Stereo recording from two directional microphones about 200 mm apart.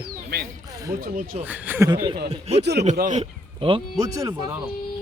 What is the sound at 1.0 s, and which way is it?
Speech, 45° right (ahead or behind).